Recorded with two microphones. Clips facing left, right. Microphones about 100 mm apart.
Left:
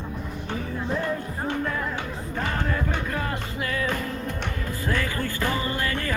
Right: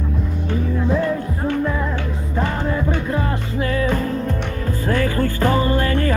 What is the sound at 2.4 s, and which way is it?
Music, 30° right (ahead or behind).